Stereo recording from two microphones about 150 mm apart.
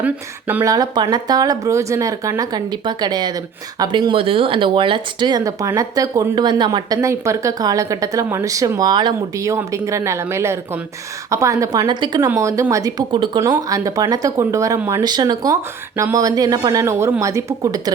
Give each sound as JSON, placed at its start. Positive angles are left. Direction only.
{"t": 0.0, "sound": "speech", "side_deg": -10}
{"t": 0.6, "sound": "speech", "side_deg": -25}